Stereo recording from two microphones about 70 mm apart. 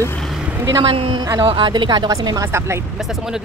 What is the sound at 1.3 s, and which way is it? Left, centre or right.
Speech, right.